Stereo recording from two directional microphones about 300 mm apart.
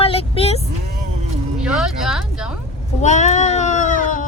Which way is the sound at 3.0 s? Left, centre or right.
Left.